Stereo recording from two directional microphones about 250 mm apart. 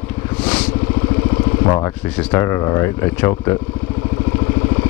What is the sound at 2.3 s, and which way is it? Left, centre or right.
Speech, centre.